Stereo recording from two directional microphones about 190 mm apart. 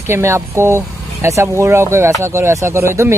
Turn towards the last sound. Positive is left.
turn(degrees=-15)  # may be behind; listen again after turning